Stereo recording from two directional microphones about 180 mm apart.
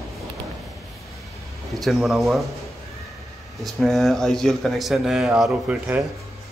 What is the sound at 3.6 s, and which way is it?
Speech, centre (ahead or behind).